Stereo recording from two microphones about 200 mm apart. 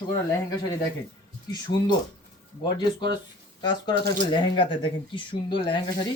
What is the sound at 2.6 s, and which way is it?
Speech, 20° left (ahead or behind).